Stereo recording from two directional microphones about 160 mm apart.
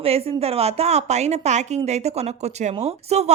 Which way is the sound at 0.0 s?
40° right (ahead or behind).